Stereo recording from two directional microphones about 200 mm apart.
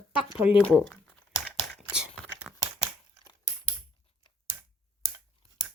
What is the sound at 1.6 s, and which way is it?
Whispering, 5° right (ahead or behind).